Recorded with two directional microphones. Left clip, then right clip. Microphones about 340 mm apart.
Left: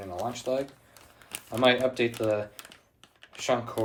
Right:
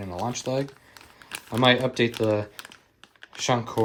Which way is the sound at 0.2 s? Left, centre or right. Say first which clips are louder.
Right 2 dB; centre.